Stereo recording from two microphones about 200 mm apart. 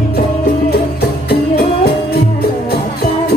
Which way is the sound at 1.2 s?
50° left (ahead or behind).